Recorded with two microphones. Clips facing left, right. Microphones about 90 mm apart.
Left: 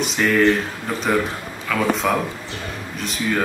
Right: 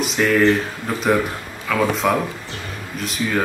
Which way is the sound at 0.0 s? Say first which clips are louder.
Right 1 dB; centre (ahead or behind).